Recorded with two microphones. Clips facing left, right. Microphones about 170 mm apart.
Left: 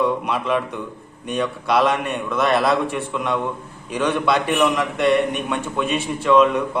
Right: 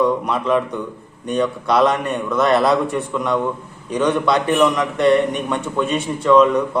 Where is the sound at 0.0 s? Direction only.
5° left (ahead or behind).